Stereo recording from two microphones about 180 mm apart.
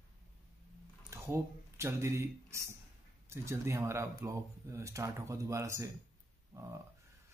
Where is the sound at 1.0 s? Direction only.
15° right (ahead or behind).